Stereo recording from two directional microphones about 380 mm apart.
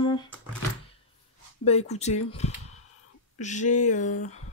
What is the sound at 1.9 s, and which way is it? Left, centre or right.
Speech, centre.